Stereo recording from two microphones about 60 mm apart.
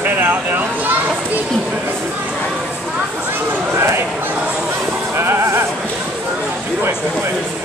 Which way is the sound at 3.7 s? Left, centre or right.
Right.